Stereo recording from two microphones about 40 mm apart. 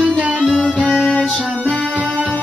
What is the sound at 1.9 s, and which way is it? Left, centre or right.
Music, right.